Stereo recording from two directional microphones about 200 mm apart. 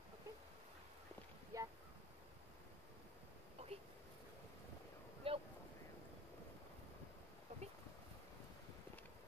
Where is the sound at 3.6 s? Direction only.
30° right (ahead or behind).